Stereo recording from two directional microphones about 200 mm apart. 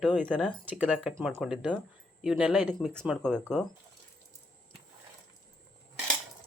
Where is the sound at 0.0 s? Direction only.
5° left (ahead or behind).